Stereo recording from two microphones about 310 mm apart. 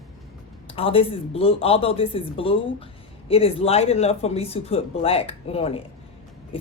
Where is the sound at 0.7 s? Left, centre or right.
Centre.